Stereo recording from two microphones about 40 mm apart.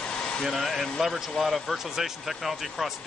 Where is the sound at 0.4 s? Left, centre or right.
Centre.